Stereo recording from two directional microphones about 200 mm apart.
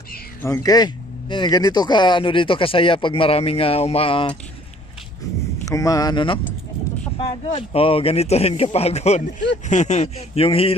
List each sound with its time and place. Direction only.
0.4 s speech: 15° left (ahead or behind)
5.7 s a man's voice: 15° left (ahead or behind)